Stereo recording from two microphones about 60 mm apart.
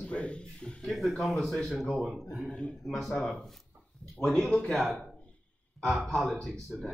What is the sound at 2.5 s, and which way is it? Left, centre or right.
Speech, centre.